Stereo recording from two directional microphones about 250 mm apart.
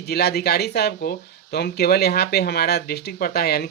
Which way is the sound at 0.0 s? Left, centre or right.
Left.